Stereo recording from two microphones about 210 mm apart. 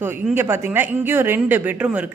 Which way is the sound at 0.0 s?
10° right (ahead or behind).